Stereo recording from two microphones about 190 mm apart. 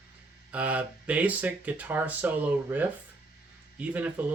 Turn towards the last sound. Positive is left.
turn(degrees=-10)  # may be behind; listen again after turning